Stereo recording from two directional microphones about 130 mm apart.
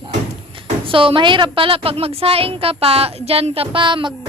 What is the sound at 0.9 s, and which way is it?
A woman's voice, 40° right (ahead or behind).